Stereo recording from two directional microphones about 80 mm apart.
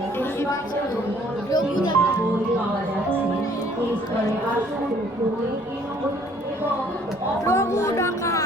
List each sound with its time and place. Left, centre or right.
1.5 s music: left
7.4 s speech: left